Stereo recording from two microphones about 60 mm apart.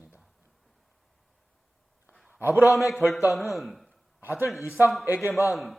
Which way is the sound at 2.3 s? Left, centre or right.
Right.